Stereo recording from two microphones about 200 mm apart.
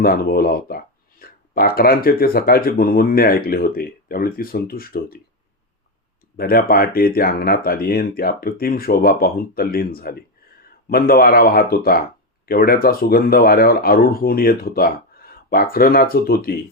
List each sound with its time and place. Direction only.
0.0 s speech: 45° left (ahead or behind)
6.3 s speech: 50° left (ahead or behind)